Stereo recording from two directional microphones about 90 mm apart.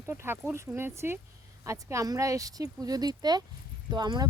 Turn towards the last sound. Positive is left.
turn(degrees=-50)  # may be behind; listen again after turning